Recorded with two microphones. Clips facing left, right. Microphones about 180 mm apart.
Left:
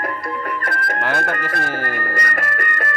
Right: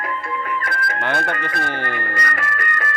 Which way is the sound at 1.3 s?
45° left (ahead or behind).